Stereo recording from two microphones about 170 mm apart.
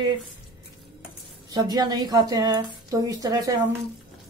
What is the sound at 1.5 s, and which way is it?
A woman's voice, 25° right (ahead or behind).